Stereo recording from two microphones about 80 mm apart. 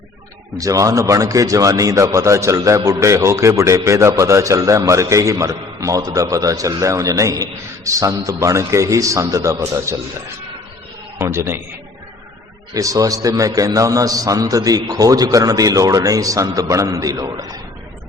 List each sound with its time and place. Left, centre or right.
0.6 s a man's voice: right
11.2 s a man's voice: right
12.7 s a man's voice: right